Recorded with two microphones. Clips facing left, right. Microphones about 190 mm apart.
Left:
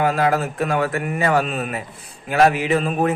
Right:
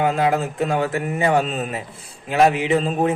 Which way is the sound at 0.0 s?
20° right (ahead or behind).